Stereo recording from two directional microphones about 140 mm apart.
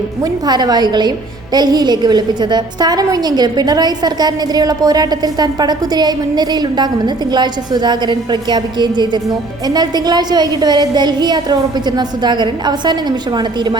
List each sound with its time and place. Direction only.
0.2 s a woman's voice: 30° right (ahead or behind)